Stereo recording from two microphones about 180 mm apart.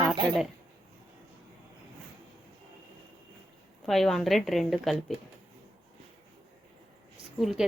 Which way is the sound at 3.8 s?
Centre (ahead or behind).